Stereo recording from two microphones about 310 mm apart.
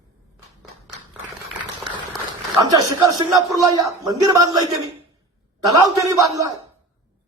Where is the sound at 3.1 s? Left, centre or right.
Centre.